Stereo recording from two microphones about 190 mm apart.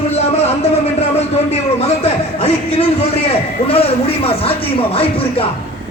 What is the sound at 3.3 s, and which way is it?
Speech, 30° left (ahead or behind).